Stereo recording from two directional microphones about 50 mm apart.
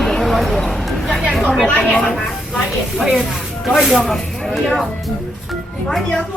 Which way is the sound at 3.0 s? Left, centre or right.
Centre.